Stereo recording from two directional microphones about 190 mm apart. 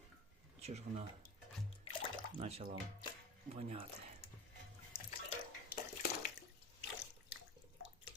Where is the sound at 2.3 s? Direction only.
35° right (ahead or behind).